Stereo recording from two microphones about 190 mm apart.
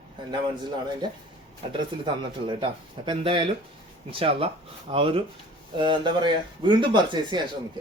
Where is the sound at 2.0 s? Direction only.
25° right (ahead or behind).